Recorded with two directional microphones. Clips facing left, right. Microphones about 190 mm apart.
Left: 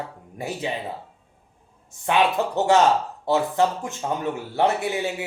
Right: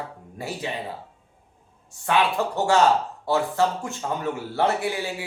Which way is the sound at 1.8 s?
20° left (ahead or behind).